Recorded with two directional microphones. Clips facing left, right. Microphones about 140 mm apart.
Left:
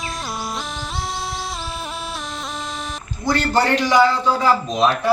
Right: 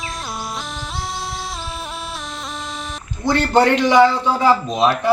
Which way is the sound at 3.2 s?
20° right (ahead or behind).